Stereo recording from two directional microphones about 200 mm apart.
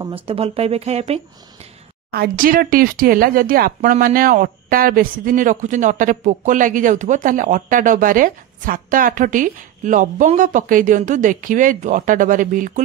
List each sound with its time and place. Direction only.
0.0 s speech: 30° right (ahead or behind)
2.0 s speech: 50° right (ahead or behind)